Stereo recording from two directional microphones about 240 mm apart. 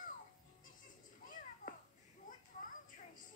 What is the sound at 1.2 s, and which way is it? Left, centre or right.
Children playing, left.